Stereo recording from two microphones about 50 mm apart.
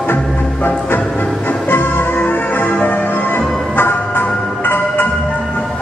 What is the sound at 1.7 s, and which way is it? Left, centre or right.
Music, left.